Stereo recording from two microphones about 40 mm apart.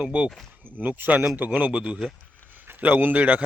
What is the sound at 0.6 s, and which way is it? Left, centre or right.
A man's voice, right.